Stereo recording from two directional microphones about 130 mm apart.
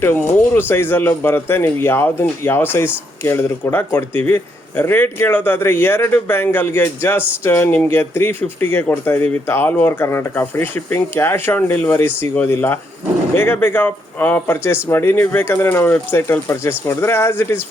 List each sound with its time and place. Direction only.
0.0 s speech: 15° left (ahead or behind)